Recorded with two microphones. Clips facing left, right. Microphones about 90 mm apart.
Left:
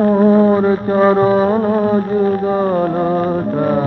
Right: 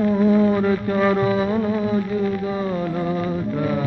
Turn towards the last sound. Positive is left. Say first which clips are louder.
# left 7 dB
turn(degrees=45)  # may be behind; listen again after turning